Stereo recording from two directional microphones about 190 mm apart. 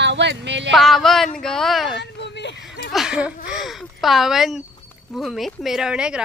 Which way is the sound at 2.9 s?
5° right (ahead or behind).